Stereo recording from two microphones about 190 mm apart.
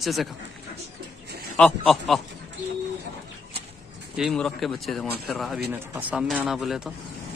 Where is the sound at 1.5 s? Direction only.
5° left (ahead or behind).